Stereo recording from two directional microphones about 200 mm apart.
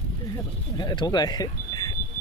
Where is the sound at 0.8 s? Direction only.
20° left (ahead or behind).